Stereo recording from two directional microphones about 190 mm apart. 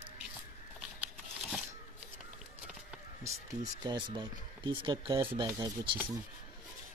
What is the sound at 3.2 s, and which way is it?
Speech, 20° right (ahead or behind).